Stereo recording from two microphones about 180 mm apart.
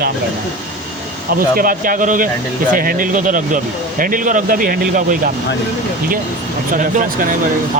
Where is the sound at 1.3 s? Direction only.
50° right (ahead or behind).